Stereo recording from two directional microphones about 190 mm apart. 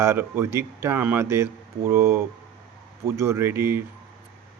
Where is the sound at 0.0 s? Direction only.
15° right (ahead or behind).